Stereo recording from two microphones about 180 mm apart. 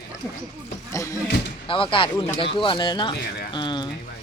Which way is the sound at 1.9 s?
30° left (ahead or behind).